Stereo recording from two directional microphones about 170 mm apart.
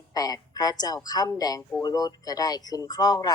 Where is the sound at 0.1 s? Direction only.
20° left (ahead or behind).